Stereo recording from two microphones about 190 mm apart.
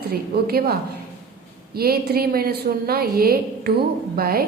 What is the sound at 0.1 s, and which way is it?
A woman's voice, 55° right (ahead or behind).